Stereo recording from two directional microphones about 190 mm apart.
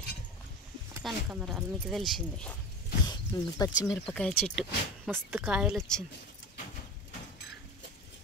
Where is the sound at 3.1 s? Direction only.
20° left (ahead or behind).